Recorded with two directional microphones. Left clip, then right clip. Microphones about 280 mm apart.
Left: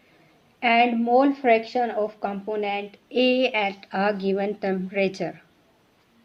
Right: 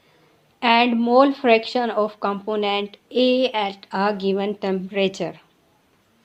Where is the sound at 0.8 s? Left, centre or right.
Right.